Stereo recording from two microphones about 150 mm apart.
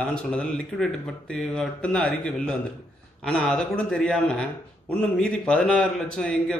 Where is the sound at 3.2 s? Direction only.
5° left (ahead or behind).